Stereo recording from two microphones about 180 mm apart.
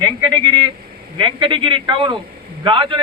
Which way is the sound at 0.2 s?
20° right (ahead or behind).